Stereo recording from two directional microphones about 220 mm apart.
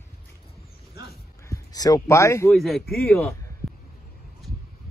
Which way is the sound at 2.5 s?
Centre (ahead or behind).